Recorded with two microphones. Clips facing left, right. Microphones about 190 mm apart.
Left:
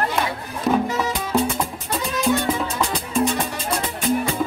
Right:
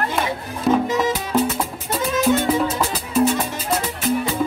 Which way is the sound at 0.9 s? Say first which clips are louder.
Right 4 dB; 20° right (ahead or behind).